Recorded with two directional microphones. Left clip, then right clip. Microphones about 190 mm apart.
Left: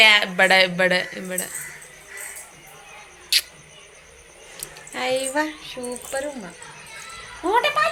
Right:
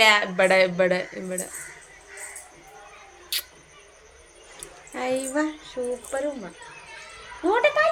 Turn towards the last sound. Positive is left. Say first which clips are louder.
# left 1 dB
turn(degrees=-10)  # may be behind; listen again after turning